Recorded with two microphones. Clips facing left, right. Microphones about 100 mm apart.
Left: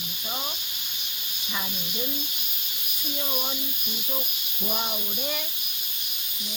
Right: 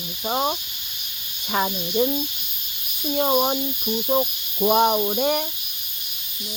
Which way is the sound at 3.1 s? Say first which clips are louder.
Right 13 dB; 60° right (ahead or behind).